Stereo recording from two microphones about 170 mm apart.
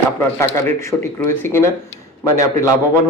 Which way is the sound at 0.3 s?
15° left (ahead or behind).